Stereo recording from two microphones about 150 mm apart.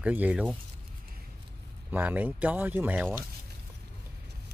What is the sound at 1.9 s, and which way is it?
Speech, 10° right (ahead or behind).